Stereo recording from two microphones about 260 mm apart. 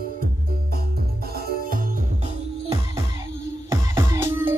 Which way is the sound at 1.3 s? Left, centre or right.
Right.